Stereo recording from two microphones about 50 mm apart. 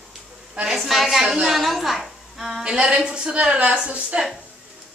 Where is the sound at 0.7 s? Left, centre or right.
Centre.